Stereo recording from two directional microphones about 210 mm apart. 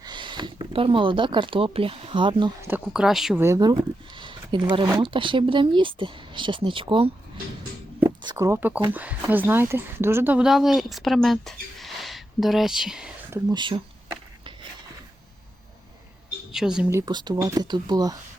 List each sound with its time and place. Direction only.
0.0 s speech: 20° right (ahead or behind)
2.6 s speech: 5° right (ahead or behind)
3.4 s speech: 15° right (ahead or behind)
8.0 s a sound: 20° right (ahead or behind)
8.9 s speech: 5° right (ahead or behind)
13.5 s speech: 20° right (ahead or behind)
16.5 s speech: 5° right (ahead or behind)
16.9 s speech: 20° right (ahead or behind)